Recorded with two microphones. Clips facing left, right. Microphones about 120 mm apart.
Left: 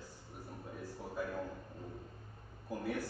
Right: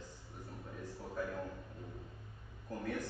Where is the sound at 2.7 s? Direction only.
10° left (ahead or behind).